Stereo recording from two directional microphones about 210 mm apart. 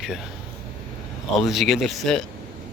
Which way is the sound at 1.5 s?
Centre (ahead or behind).